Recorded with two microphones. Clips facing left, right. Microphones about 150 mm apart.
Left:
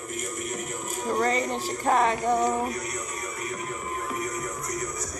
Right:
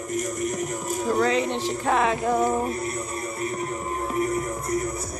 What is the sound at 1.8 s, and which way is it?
Music, centre (ahead or behind).